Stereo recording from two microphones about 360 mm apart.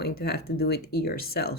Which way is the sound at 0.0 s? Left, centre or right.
Left.